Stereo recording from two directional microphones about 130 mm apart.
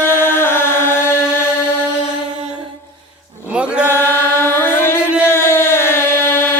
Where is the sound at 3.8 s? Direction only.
20° left (ahead or behind).